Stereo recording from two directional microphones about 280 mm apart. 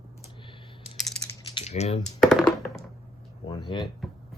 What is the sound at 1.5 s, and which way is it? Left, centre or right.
Typing, left.